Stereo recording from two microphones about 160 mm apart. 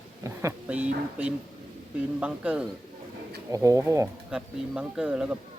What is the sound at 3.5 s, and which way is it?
Speech, 20° right (ahead or behind).